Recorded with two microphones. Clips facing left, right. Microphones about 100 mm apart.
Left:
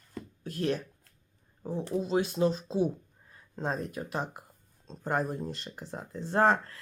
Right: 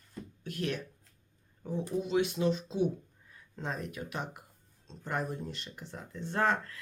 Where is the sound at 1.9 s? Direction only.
35° left (ahead or behind).